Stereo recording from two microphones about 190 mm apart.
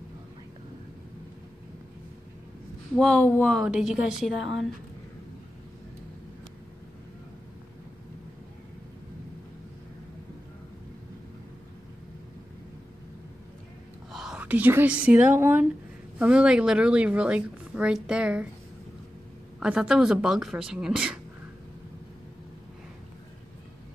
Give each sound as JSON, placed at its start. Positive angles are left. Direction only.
{"t": 3.0, "sound": "a woman's voice", "side_deg": 5}
{"t": 14.1, "sound": "a woman's voice", "side_deg": -5}
{"t": 19.6, "sound": "a woman's voice", "side_deg": -5}